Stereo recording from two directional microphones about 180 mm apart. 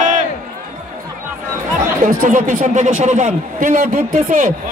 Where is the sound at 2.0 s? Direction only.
45° right (ahead or behind).